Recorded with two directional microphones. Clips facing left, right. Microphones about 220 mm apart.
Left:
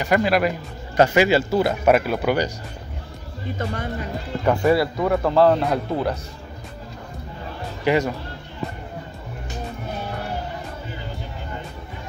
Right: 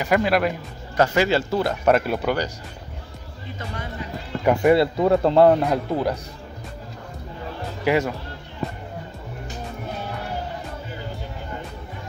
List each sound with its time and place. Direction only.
0.0 s speech: centre (ahead or behind)
0.9 s speech: 15° left (ahead or behind)
3.5 s speech: 50° left (ahead or behind)
4.5 s speech: 20° right (ahead or behind)
7.8 s speech: 5° right (ahead or behind)